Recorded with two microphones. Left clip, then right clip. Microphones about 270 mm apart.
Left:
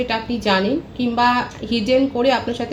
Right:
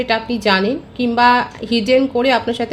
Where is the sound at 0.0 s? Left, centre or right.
Right.